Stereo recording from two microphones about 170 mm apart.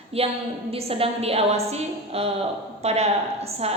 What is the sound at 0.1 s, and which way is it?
A woman's voice, 35° right (ahead or behind).